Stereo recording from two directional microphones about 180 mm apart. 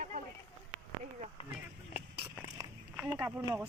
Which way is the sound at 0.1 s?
45° right (ahead or behind).